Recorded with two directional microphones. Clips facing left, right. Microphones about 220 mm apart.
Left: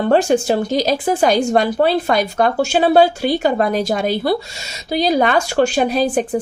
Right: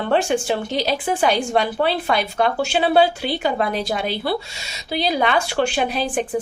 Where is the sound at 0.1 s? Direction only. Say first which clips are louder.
Left 4 dB; 40° left (ahead or behind).